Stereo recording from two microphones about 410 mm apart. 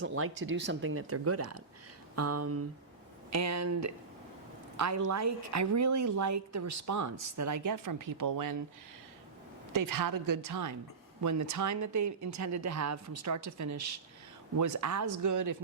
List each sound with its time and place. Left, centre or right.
0.0 s a woman's voice: right
9.7 s a woman's voice: right